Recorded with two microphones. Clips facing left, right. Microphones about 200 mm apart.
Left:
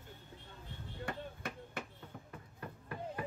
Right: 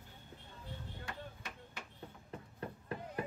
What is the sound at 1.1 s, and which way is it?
Chop, 55° left (ahead or behind).